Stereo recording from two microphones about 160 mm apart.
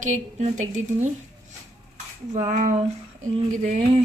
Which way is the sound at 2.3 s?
45° right (ahead or behind).